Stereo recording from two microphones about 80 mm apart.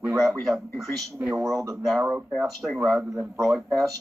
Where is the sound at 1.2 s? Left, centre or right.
Right.